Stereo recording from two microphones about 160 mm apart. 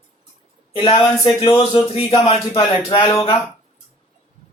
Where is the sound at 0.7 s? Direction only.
35° left (ahead or behind).